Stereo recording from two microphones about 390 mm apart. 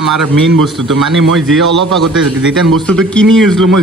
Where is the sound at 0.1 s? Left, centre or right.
Right.